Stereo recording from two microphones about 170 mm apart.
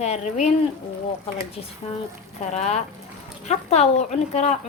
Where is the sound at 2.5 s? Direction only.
40° left (ahead or behind).